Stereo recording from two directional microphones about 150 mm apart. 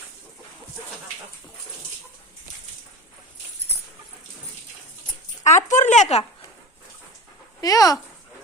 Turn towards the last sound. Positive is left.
turn(degrees=25)  # may be behind; listen again after turning